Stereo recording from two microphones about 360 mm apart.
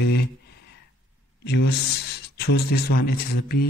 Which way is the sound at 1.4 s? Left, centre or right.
Left.